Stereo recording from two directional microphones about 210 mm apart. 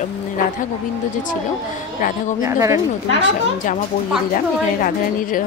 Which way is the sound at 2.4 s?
15° right (ahead or behind).